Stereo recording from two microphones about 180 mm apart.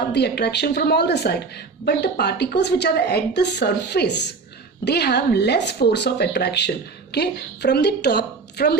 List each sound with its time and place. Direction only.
0.1 s a woman's voice: 70° left (ahead or behind)